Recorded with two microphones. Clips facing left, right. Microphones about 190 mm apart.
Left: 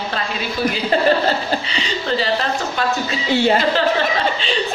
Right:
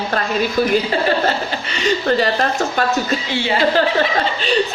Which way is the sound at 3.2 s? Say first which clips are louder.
Left 6 dB; 45° left (ahead or behind).